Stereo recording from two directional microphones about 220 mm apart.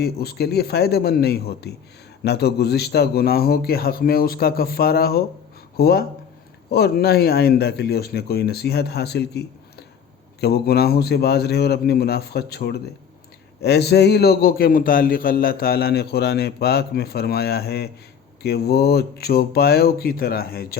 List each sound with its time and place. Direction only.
0.0 s a man's voice: 45° left (ahead or behind)
10.4 s a man's voice: 45° left (ahead or behind)